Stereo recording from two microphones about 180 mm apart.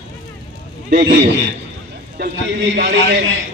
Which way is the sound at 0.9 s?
70° right (ahead or behind).